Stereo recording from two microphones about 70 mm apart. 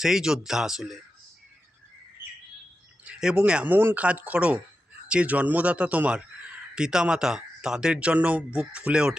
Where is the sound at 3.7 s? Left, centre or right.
Right.